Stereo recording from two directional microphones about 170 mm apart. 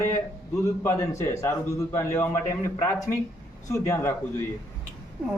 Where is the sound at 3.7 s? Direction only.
15° left (ahead or behind).